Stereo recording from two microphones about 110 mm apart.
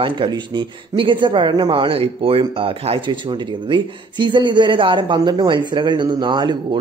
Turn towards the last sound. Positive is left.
turn(degrees=-45)  # may be behind; listen again after turning